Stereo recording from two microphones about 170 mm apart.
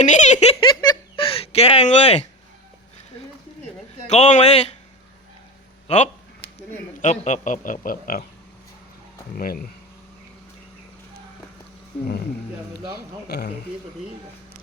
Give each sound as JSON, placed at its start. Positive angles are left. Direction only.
{"t": 0.0, "sound": "giggle", "side_deg": 45}
{"t": 0.6, "sound": "a sound", "side_deg": 25}
{"t": 4.0, "sound": "a man's voice", "side_deg": 40}
{"t": 5.9, "sound": "a man's voice", "side_deg": 40}
{"t": 9.3, "sound": "speech", "side_deg": 55}
{"t": 13.2, "sound": "speech", "side_deg": 75}